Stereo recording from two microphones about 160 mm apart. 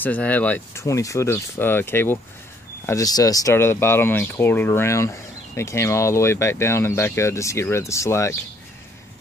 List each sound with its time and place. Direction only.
0.0 s speech: 10° left (ahead or behind)